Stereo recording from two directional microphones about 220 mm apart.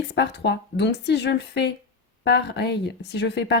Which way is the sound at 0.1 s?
50° left (ahead or behind).